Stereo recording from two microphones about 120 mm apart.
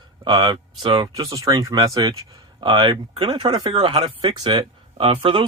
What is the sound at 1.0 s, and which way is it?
Speech, 30° right (ahead or behind).